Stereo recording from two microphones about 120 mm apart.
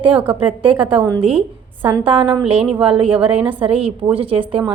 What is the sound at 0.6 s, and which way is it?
A woman's voice, 45° right (ahead or behind).